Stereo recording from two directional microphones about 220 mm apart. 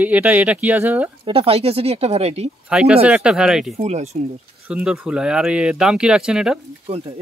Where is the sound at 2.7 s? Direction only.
5° right (ahead or behind).